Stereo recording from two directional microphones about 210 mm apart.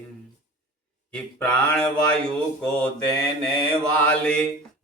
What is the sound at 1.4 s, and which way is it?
Speech, 5° left (ahead or behind).